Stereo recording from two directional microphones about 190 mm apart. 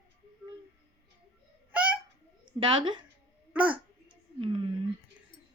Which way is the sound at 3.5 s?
5° right (ahead or behind).